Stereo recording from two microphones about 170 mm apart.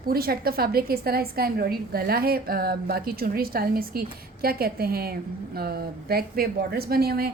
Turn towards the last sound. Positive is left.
turn(degrees=-65)  # may be behind; listen again after turning